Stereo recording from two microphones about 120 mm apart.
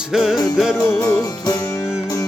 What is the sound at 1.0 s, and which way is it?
Music, 30° left (ahead or behind).